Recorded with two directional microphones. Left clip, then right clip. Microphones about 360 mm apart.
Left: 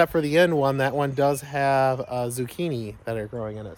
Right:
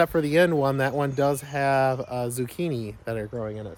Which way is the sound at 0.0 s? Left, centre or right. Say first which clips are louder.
Left 1 dB; centre.